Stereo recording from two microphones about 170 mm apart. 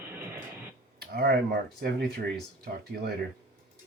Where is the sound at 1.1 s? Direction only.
65° right (ahead or behind).